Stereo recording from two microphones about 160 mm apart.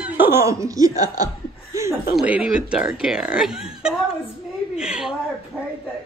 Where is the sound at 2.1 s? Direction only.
5° right (ahead or behind).